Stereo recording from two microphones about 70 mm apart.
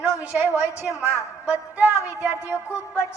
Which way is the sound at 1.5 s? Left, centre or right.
Right.